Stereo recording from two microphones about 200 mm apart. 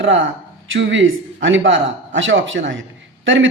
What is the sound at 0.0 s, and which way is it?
Speech, 70° right (ahead or behind).